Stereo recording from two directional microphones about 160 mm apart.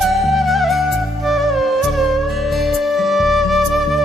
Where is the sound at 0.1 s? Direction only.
Centre (ahead or behind).